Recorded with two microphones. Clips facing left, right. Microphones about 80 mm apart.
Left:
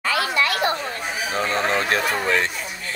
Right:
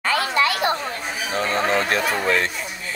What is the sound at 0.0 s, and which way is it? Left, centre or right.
Children playing, right.